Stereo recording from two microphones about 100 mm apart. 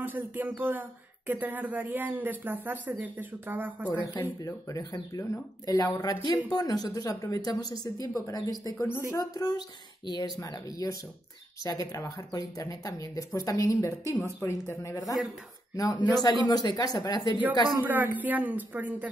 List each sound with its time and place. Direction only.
0.0 s speech: 20° right (ahead or behind)
4.0 s speech: 40° left (ahead or behind)
17.7 s speech: 20° right (ahead or behind)